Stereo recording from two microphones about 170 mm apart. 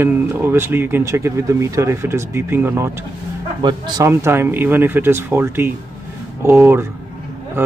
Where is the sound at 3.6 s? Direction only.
25° right (ahead or behind).